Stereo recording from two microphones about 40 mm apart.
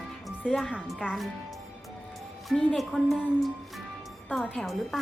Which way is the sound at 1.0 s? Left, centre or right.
Right.